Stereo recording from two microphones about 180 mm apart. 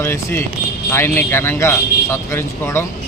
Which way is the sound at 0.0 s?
15° left (ahead or behind).